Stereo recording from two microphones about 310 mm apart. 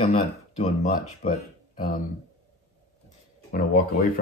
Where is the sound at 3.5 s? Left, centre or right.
Left.